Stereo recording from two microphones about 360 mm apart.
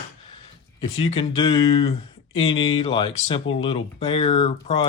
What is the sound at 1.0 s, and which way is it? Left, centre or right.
Speech, centre.